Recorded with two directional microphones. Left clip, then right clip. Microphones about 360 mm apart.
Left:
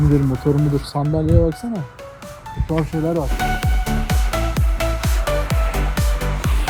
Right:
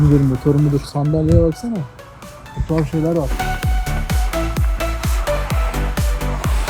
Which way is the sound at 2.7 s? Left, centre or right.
Centre.